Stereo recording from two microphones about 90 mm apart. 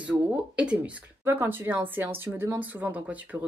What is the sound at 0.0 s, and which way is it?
A woman's voice, 15° right (ahead or behind).